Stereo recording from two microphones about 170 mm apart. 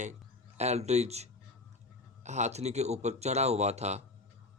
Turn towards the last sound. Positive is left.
turn(degrees=-40)  # may be behind; listen again after turning